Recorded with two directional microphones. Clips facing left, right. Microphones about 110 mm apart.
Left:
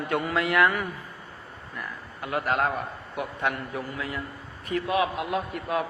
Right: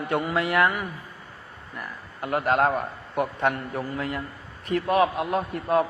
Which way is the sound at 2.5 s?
40° right (ahead or behind).